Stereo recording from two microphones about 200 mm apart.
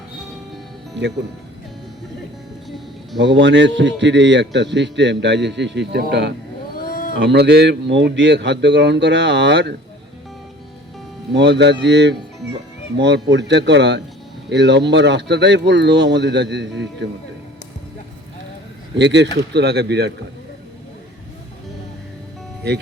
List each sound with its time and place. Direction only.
3.2 s a man's voice: 60° right (ahead or behind)
6.8 s a sound: 45° left (ahead or behind)
7.2 s a man's voice: 60° right (ahead or behind)
11.3 s a man's voice: 60° right (ahead or behind)
18.9 s a man's voice: 60° right (ahead or behind)